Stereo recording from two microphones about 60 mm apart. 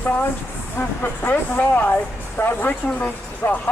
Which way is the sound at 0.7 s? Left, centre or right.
Left.